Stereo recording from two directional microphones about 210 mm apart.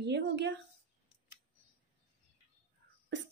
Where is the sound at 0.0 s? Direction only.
55° right (ahead or behind).